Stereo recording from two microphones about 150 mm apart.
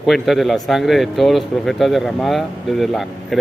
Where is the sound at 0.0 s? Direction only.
Centre (ahead or behind).